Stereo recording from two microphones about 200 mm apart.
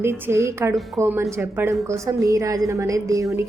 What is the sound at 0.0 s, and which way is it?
A woman's voice, 10° right (ahead or behind).